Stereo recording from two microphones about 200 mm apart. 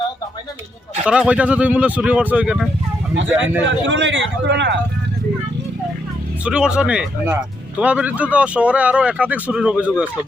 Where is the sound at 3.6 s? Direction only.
65° right (ahead or behind).